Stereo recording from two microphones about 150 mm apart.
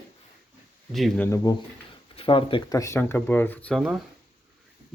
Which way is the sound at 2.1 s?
35° left (ahead or behind).